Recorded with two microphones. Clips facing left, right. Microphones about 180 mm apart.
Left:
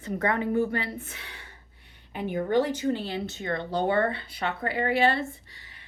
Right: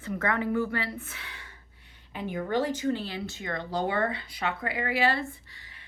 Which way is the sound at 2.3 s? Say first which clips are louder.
Left 4 dB; 30° left (ahead or behind).